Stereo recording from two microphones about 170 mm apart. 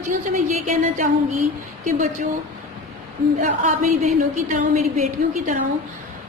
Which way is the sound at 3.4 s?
50° right (ahead or behind).